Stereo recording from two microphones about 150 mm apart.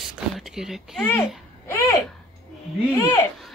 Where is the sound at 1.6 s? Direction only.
20° left (ahead or behind).